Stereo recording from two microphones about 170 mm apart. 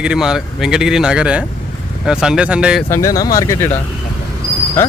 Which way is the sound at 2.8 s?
20° left (ahead or behind).